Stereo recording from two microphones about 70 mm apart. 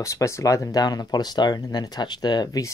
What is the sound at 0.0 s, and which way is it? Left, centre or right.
Speech, left.